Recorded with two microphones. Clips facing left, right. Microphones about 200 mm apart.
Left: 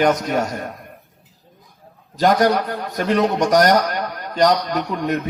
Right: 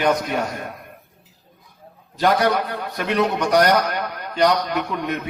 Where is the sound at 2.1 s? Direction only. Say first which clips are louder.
Left 3 dB; 45° left (ahead or behind).